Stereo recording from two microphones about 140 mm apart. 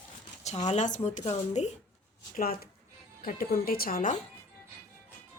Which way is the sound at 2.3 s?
90° left.